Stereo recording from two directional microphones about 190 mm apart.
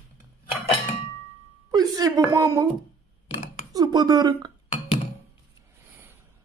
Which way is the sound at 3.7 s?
20° right (ahead or behind).